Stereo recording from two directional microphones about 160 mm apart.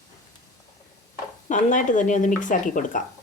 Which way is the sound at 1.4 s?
50° left (ahead or behind).